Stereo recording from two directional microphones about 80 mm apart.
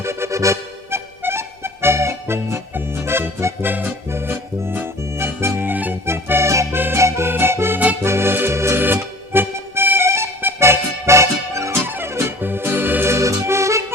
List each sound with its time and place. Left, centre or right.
0.0 s music: right
8.0 s accordion: right
11.9 s music: right